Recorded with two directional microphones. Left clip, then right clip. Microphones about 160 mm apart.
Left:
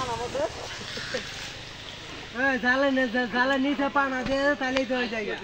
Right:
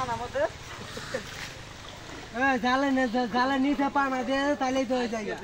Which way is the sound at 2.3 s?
55° right (ahead or behind).